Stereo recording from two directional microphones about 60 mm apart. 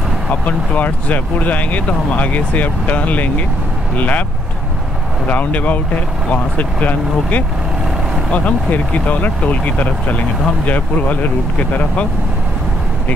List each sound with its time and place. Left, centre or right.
0.3 s speech: left
5.2 s speech: left